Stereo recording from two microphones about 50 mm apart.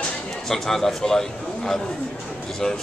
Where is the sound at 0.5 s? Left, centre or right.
Centre.